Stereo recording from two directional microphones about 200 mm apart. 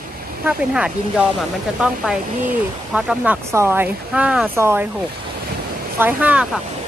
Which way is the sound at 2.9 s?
5° right (ahead or behind).